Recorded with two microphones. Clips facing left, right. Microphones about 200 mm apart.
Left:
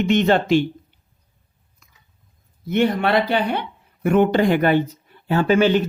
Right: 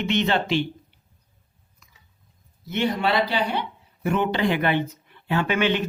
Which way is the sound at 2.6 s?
55° left (ahead or behind).